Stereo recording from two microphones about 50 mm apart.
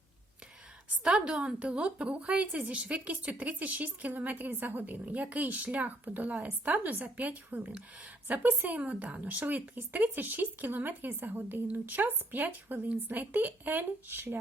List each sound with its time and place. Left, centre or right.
1.0 s a woman's voice: centre; by 14.3 s right